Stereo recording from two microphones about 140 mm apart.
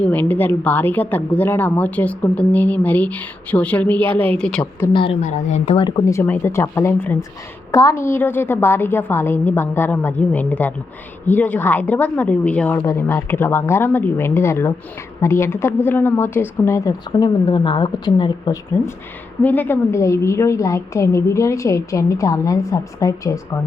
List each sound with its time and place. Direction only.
0.0 s a woman's voice: 10° left (ahead or behind)
5.2 s a woman's voice: 55° left (ahead or behind)
6.1 s a woman's voice: 15° left (ahead or behind)
19.4 s a woman's voice: 10° left (ahead or behind)